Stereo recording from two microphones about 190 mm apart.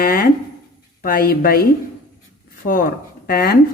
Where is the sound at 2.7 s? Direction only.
50° left (ahead or behind).